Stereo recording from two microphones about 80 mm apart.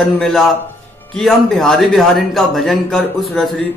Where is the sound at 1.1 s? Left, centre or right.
Centre.